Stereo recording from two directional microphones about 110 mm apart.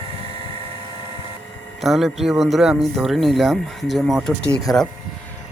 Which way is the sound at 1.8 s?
Centre (ahead or behind).